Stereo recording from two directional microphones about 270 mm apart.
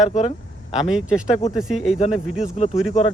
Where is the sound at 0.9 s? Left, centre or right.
Centre.